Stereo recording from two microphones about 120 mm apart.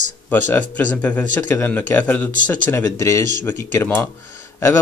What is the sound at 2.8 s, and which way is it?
Speech, 25° left (ahead or behind).